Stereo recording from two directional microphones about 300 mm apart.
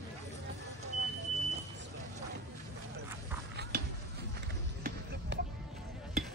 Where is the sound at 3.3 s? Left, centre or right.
Centre.